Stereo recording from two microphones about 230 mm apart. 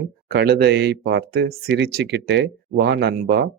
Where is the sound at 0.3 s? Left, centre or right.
Right.